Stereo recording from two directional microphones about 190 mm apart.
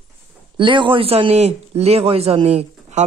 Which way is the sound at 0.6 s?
25° right (ahead or behind).